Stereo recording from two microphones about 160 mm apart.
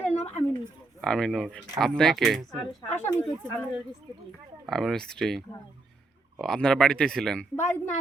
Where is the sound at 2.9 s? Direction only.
10° left (ahead or behind).